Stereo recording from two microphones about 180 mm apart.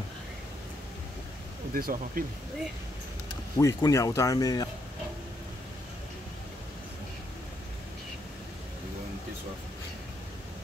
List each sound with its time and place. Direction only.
1.7 s speech: 55° right (ahead or behind)
3.5 s speech: 20° left (ahead or behind)